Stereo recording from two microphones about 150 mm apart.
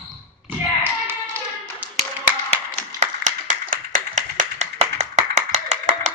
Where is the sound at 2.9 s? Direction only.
60° right (ahead or behind).